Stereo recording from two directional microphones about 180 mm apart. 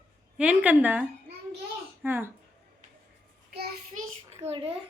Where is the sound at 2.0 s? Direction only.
10° right (ahead or behind).